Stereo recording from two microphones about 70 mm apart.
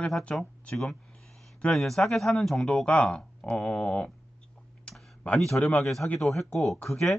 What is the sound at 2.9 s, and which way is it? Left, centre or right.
Speech, centre.